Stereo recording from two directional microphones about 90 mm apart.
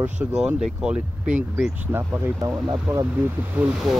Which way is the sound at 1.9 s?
25° right (ahead or behind).